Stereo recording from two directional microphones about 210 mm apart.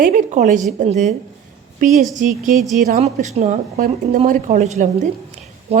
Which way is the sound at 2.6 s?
Centre (ahead or behind).